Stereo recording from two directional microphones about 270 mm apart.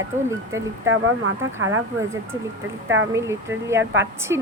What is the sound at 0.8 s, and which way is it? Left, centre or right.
Speech, right.